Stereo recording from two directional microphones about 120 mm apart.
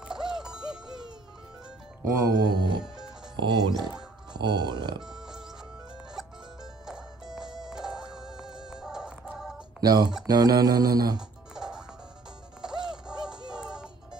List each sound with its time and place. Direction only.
0.1 s music: 5° right (ahead or behind)
2.2 s mantra: 35° right (ahead or behind)
5.0 s music: 5° right (ahead or behind)
9.8 s speech: 35° right (ahead or behind)
10.2 s mantra: 30° right (ahead or behind)
11.1 s music: 5° right (ahead or behind)